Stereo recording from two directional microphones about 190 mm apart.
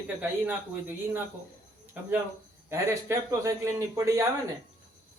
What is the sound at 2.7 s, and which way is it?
A man's voice, 15° right (ahead or behind).